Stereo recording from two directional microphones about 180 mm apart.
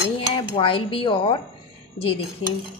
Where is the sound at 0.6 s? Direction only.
30° left (ahead or behind).